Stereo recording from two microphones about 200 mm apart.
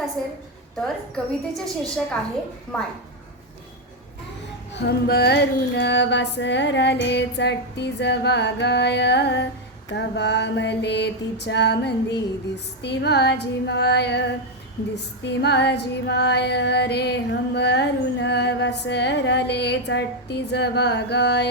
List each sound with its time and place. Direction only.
0.8 s a woman's voice: centre (ahead or behind)
4.7 s female singing: 55° left (ahead or behind)